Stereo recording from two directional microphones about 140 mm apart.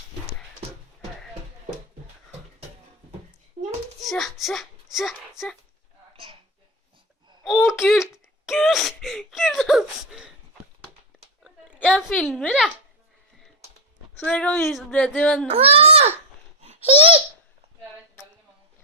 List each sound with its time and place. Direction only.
4.0 s a child's voice: centre (ahead or behind)
7.4 s speech: centre (ahead or behind)
11.4 s a sound: 5° right (ahead or behind)
12.1 s speech: 5° left (ahead or behind)
14.2 s speech: 10° left (ahead or behind)
15.4 s a child's voice: 45° right (ahead or behind)
16.6 s babbling: 50° right (ahead or behind)